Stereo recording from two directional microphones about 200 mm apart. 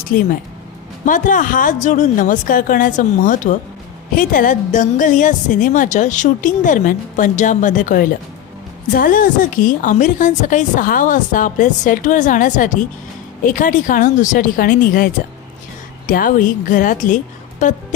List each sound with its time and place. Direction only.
0.1 s a woman's voice: 45° left (ahead or behind)